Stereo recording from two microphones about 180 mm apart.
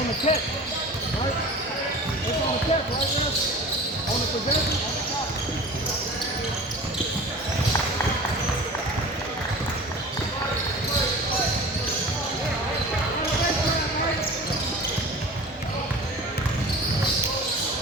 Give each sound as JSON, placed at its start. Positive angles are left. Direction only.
{"t": 0.3, "sound": "speech", "side_deg": 35}